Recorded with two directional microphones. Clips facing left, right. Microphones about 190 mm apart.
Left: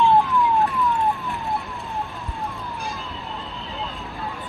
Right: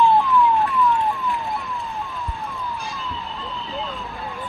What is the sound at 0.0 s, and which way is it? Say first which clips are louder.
Emergency vehicle: right 1 dB; 20° left (ahead or behind).